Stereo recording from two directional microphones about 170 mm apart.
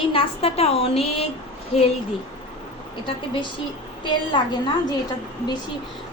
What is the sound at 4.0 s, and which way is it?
Speech, 25° left (ahead or behind).